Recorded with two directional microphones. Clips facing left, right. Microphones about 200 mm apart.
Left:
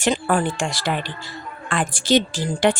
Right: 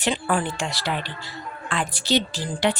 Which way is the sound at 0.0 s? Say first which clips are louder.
Left 4 dB; 40° left (ahead or behind).